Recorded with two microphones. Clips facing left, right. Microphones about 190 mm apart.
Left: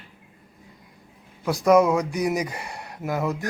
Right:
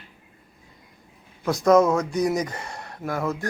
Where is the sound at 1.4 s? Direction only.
10° left (ahead or behind).